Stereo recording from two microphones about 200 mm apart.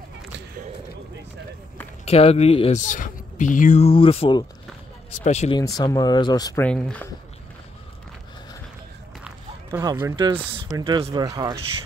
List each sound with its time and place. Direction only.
2.0 s speech: 30° left (ahead or behind)
5.8 s speech: 20° left (ahead or behind)
6.6 s speech: 5° left (ahead or behind)
9.7 s speech: 20° right (ahead or behind)